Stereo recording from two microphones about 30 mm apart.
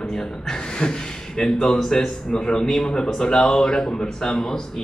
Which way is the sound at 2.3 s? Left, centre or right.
Left.